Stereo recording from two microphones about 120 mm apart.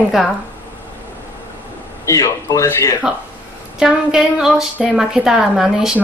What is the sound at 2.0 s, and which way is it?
Speech, 30° left (ahead or behind).